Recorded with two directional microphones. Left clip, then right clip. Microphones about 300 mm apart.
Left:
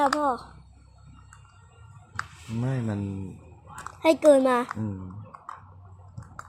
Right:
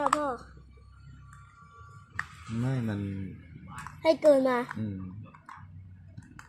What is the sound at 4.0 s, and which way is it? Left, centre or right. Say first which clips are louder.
Speech: left 4 dB; centre.